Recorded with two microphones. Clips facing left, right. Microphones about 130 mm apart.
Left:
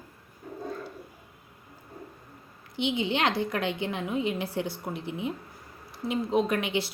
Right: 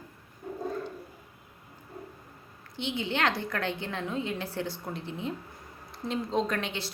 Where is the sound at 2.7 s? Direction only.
15° left (ahead or behind).